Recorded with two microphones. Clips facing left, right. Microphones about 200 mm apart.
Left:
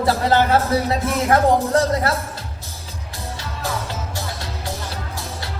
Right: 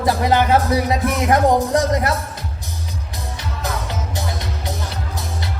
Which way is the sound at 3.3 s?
20° right (ahead or behind).